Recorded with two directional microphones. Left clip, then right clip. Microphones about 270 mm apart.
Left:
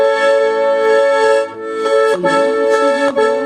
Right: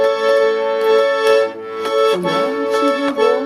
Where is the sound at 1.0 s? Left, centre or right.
Centre.